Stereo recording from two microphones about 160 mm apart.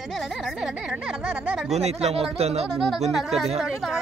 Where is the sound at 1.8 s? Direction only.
40° right (ahead or behind).